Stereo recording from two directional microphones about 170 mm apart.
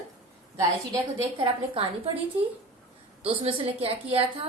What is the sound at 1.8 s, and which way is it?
Speech, 35° right (ahead or behind).